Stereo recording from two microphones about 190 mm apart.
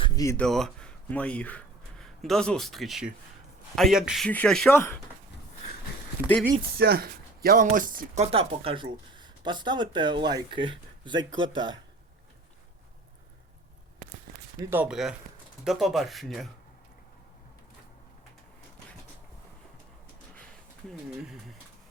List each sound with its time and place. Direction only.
0.0 s a sound: 20° left (ahead or behind)
0.3 s speech: centre (ahead or behind)
6.6 s speech: 55° right (ahead or behind); by 11.8 s 25° right (ahead or behind)
14.6 s speech: 10° right (ahead or behind)
21.2 s speech: 5° right (ahead or behind)